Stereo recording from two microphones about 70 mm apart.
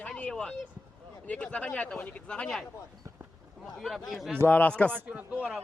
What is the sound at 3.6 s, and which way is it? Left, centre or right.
Speech, centre.